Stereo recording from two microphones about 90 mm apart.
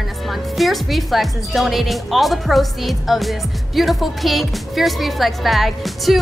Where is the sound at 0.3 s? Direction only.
Centre (ahead or behind).